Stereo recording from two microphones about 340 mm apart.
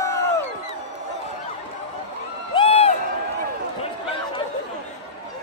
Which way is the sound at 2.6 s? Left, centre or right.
Centre.